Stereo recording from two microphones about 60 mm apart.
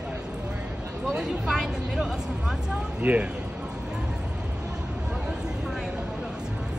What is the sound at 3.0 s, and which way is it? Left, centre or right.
Speech, right.